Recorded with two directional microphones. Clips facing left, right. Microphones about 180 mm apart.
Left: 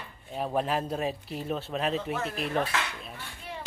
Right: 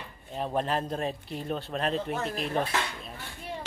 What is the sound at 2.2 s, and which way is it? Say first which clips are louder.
Speech: right 1 dB; 35° right (ahead or behind).